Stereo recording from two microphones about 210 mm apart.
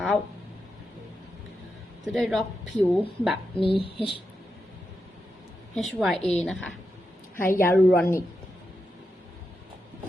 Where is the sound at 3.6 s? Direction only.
25° left (ahead or behind).